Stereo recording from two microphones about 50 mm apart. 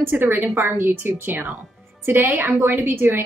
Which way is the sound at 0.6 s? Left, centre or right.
Right.